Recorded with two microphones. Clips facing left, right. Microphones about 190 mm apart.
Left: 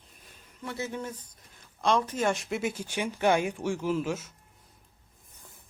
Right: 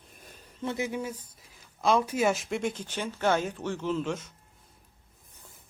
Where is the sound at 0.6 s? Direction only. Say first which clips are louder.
Right 4 dB; 20° right (ahead or behind).